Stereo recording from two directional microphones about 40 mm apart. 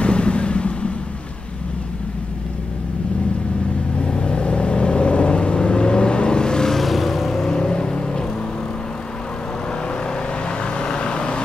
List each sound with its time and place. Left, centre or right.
0.0 s vehicle: left
4.0 s vehicle: left
6.8 s vehicle: centre
7.5 s vehicle: left
10.6 s vehicle: left